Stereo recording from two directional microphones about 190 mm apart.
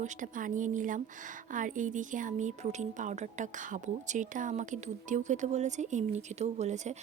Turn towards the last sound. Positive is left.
turn(degrees=-35)  # may be behind; listen again after turning